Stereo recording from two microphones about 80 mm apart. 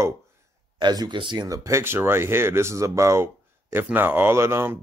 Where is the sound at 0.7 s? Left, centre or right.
Right.